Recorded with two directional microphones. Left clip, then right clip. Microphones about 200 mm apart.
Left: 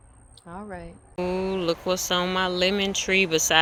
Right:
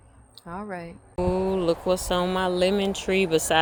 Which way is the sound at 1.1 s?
5° right (ahead or behind).